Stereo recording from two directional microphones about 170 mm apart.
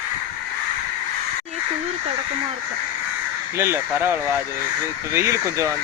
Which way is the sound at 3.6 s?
15° right (ahead or behind).